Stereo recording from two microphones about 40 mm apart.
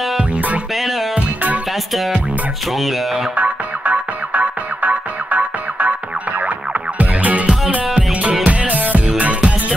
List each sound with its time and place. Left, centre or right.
0.2 s music: right
3.3 s music: right
7.0 s music: right